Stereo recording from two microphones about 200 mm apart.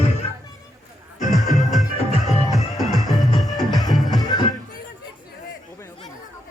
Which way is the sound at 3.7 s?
20° left (ahead or behind).